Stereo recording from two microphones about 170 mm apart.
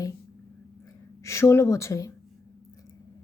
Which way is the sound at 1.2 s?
15° left (ahead or behind).